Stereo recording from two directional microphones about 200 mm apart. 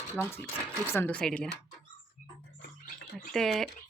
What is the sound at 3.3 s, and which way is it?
Speech, centre (ahead or behind).